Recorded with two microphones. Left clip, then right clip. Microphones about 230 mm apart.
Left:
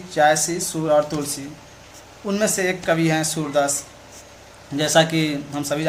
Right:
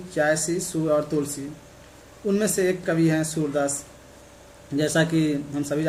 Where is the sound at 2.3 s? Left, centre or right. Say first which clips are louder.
Left 2 dB; centre.